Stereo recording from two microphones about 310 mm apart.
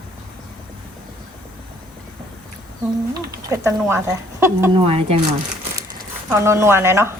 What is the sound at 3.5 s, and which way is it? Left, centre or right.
Speech, centre.